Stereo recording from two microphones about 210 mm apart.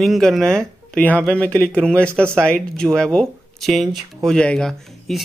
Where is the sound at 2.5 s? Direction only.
5° left (ahead or behind).